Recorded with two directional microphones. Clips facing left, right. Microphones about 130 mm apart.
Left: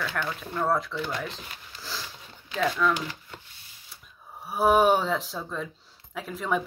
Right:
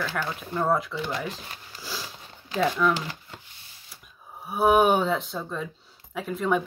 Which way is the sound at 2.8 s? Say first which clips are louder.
Right 1 dB; 10° right (ahead or behind).